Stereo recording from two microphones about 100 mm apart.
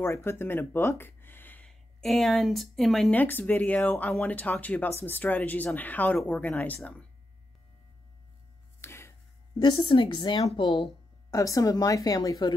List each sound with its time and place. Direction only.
0.0 s speech: 25° left (ahead or behind)
1.7 s a woman's voice: 5° left (ahead or behind)
3.1 s speech: 15° left (ahead or behind)
8.8 s a sound: 25° left (ahead or behind)
9.6 s a woman's voice: 55° left (ahead or behind)
11.2 s a woman's voice: 35° left (ahead or behind)